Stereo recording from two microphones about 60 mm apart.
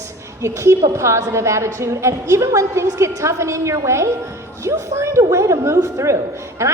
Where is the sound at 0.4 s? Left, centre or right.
Right.